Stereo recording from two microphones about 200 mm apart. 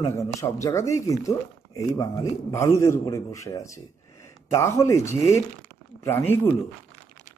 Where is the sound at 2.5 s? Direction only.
15° left (ahead or behind).